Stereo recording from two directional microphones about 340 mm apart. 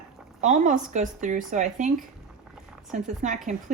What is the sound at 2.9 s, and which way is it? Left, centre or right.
Speech, right.